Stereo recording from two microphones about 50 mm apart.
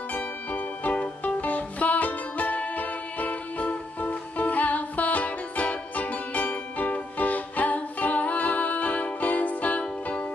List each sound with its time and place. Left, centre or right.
0.1 s music: left